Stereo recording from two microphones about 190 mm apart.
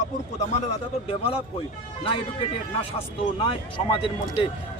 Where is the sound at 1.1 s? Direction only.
30° left (ahead or behind).